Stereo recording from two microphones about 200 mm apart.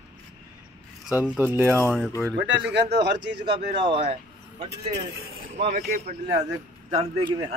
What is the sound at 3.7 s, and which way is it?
Speech, 35° right (ahead or behind).